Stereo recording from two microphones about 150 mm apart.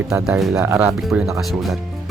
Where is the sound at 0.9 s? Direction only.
5° right (ahead or behind).